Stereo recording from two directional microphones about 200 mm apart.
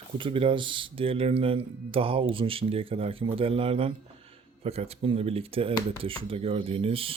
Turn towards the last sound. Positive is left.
turn(degrees=-30)  # may be behind; listen again after turning